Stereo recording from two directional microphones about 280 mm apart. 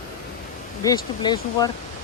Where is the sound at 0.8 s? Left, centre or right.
Centre.